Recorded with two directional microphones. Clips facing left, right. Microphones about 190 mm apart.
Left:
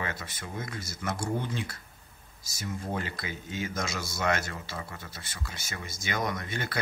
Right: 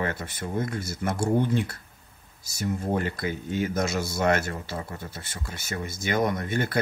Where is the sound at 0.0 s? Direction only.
55° right (ahead or behind).